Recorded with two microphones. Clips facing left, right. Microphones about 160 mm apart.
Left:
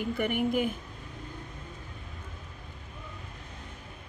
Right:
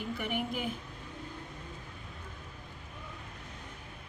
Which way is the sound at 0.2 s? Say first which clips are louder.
Left 9 dB; 55° left (ahead or behind).